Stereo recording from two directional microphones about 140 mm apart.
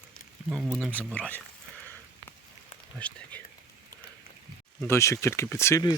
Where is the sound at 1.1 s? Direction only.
10° left (ahead or behind).